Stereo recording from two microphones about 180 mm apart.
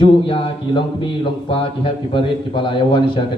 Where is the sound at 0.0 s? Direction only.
30° left (ahead or behind).